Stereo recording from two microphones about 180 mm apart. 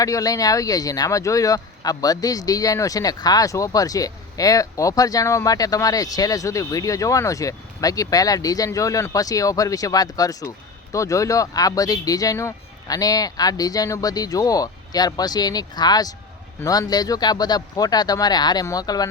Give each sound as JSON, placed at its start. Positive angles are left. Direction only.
{"t": 0.0, "sound": "speech", "side_deg": 20}